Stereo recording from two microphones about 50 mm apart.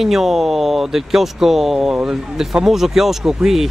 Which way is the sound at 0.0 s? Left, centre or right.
Centre.